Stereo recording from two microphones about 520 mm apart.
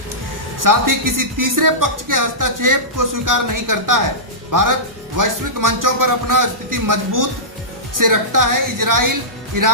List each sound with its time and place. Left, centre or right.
0.6 s speech: right